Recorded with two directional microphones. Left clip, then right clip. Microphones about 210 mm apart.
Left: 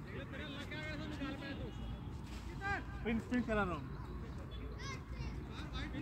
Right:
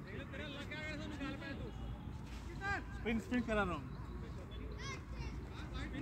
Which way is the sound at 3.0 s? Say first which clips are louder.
Even; 50° right (ahead or behind).